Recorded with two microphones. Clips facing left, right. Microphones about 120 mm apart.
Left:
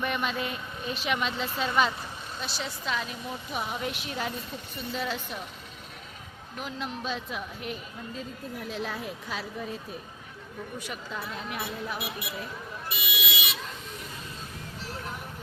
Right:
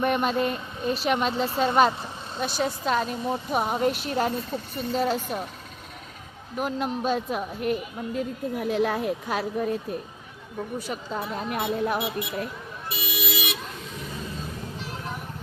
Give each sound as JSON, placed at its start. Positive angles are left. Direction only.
{"t": 0.0, "sound": "speech", "side_deg": -45}
{"t": 6.6, "sound": "speech", "side_deg": -50}
{"t": 10.8, "sound": "a woman's voice", "side_deg": -35}
{"t": 11.3, "sound": "speech", "side_deg": -45}
{"t": 11.9, "sound": "speech", "side_deg": -25}
{"t": 12.9, "sound": "vehicle", "side_deg": -35}